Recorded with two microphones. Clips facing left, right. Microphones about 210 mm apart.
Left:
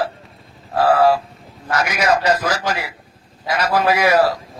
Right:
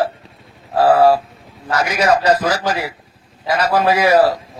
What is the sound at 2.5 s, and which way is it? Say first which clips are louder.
A man's voice: right 3 dB; 35° right (ahead or behind).